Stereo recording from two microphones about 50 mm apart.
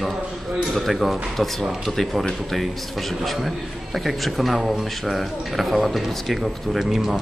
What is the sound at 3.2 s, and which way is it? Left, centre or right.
A man's voice, centre.